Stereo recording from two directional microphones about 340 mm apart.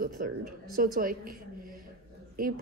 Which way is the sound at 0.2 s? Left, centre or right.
Right.